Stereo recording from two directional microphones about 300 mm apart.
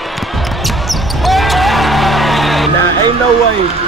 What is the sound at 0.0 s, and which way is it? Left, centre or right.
Basketball bounce, centre.